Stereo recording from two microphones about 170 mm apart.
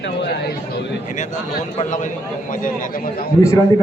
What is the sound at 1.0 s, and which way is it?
A man's voice, 45° left (ahead or behind).